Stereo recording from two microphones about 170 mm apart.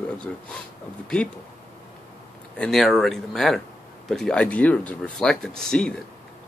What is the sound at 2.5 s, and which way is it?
Speech, 5° left (ahead or behind).